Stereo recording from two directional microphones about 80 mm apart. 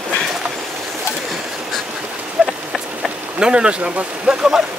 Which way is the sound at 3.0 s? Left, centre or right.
Centre.